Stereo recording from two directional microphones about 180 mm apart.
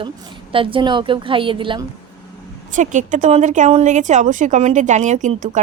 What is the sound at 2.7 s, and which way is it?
A woman's voice, 45° right (ahead or behind).